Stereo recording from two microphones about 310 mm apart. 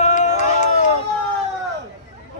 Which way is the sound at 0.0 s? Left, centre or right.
Left.